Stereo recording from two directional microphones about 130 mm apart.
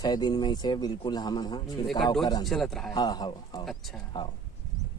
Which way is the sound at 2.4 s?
Centre (ahead or behind).